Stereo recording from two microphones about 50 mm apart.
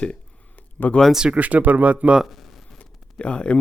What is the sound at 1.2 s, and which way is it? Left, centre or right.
Speech, right.